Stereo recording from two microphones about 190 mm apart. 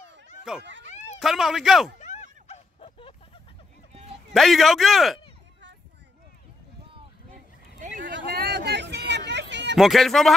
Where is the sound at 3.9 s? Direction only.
30° right (ahead or behind).